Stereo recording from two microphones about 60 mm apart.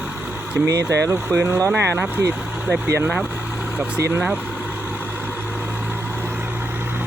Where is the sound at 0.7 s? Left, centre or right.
Right.